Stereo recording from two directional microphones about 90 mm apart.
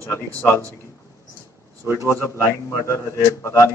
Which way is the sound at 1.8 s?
25° right (ahead or behind).